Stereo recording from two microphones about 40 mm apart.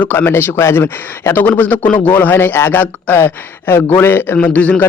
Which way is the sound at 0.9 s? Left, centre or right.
Left.